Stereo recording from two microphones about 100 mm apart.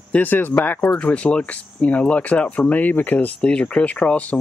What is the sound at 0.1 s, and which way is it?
Speech, 20° left (ahead or behind).